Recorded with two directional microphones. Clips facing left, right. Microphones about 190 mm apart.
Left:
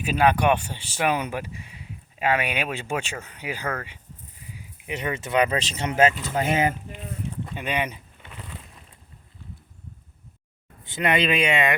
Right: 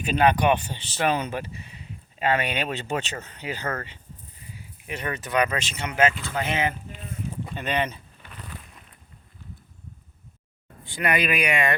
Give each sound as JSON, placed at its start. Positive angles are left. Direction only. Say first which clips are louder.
{"t": 0.0, "sound": "speech", "louder": "even", "side_deg": 5}
{"t": 6.1, "sound": "speech", "louder": "left 3 dB", "side_deg": 20}
{"t": 6.4, "sound": "speech", "louder": "left 4 dB", "side_deg": 40}
{"t": 7.5, "sound": "a sound", "louder": "right 1 dB", "side_deg": 10}
{"t": 10.8, "sound": "speech", "louder": "left 2 dB", "side_deg": 20}